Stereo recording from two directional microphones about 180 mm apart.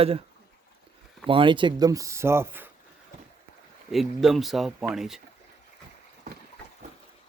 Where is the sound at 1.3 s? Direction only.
30° right (ahead or behind); by 2.6 s 10° right (ahead or behind).